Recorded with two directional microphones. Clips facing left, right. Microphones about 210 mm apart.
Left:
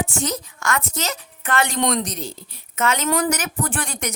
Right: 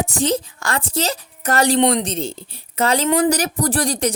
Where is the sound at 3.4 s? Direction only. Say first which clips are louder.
Right 6 dB; 35° right (ahead or behind).